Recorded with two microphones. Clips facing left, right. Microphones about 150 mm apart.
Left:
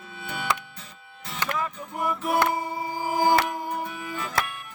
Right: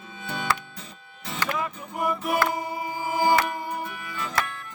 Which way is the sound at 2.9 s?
40° left (ahead or behind).